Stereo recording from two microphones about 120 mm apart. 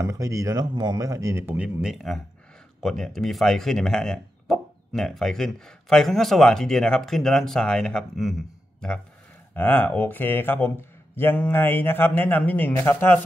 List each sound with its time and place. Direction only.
0.0 s speech: 30° right (ahead or behind)
1.8 s speech: 5° right (ahead or behind)
9.5 s speech: 15° left (ahead or behind)